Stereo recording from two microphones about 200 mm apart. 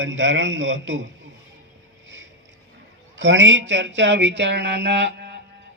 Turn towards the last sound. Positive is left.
turn(degrees=-60)  # may be behind; listen again after turning